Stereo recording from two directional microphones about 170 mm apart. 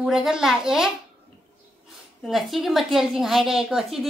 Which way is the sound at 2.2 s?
Centre (ahead or behind).